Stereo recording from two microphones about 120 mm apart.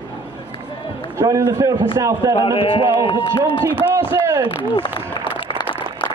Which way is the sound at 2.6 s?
50° left (ahead or behind).